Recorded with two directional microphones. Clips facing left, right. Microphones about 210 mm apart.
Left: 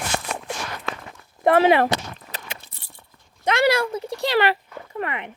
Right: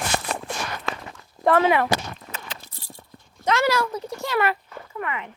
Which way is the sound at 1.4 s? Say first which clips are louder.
Left 3 dB; 25° left (ahead or behind).